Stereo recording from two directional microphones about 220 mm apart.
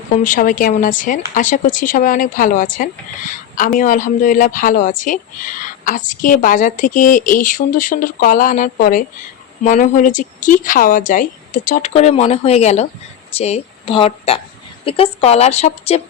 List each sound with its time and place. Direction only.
0.3 s a woman's voice: 40° left (ahead or behind)